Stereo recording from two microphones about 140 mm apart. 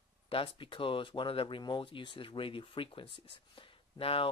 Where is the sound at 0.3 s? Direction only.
40° left (ahead or behind).